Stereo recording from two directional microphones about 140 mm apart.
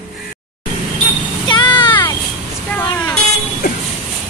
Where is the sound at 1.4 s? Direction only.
35° left (ahead or behind).